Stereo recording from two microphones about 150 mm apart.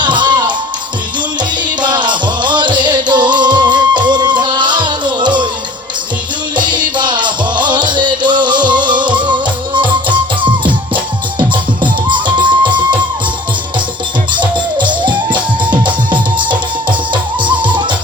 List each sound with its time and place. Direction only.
0.0 s music: 30° right (ahead or behind)
1.8 s music: 30° right (ahead or behind)
6.9 s music: 30° right (ahead or behind)
14.3 s music: 30° right (ahead or behind)
17.6 s music: 30° right (ahead or behind)